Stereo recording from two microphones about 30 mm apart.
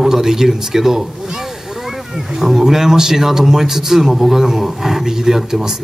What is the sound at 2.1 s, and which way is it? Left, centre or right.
Speech, centre.